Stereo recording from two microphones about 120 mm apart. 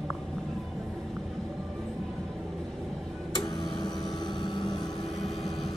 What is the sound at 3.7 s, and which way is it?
Vehicle, 35° left (ahead or behind).